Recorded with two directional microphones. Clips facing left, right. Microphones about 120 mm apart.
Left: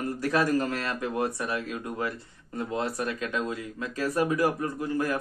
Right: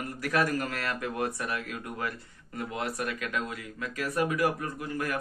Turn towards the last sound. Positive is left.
turn(degrees=25)  # may be behind; listen again after turning